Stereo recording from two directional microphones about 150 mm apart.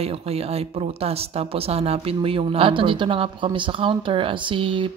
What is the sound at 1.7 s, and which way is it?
Speech, 40° right (ahead or behind).